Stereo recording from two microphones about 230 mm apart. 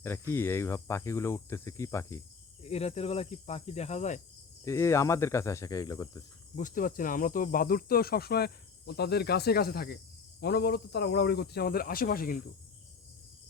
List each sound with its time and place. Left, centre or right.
0.0 s speech: centre
2.6 s cricket: left
4.6 s speech: centre
6.6 s speech: left